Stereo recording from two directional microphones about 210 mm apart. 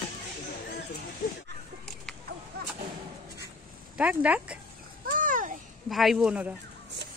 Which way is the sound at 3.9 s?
5° right (ahead or behind).